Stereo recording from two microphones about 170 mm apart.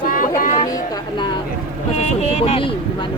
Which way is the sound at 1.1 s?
25° left (ahead or behind).